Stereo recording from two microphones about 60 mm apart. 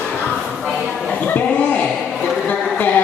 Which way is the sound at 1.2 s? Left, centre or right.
Left.